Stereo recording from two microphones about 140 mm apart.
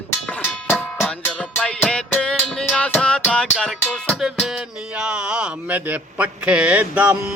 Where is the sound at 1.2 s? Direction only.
10° left (ahead or behind).